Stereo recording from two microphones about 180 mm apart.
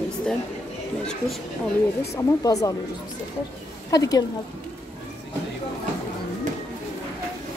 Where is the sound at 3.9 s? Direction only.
20° left (ahead or behind).